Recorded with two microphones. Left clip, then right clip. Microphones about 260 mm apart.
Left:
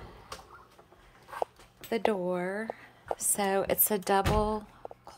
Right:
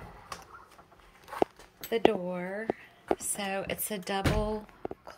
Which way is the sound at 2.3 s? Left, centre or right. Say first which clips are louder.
Left 3 dB; centre.